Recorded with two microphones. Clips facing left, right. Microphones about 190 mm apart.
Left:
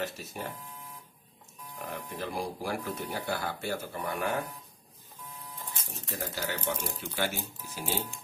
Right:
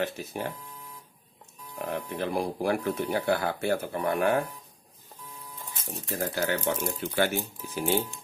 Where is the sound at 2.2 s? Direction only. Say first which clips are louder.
Right 5 dB; 55° right (ahead or behind).